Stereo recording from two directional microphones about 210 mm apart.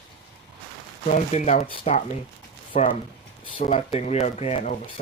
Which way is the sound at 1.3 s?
35° left (ahead or behind).